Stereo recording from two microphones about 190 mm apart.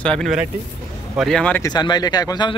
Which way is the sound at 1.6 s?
20° left (ahead or behind).